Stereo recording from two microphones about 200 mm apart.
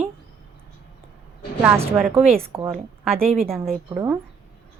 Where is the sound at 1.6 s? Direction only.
10° right (ahead or behind).